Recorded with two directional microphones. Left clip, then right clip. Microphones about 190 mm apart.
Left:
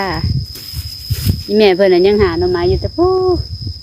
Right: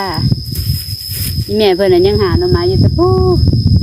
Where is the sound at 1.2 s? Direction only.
25° left (ahead or behind).